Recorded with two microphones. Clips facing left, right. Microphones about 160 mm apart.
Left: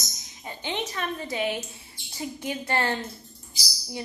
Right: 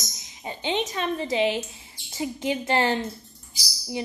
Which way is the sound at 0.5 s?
20° right (ahead or behind).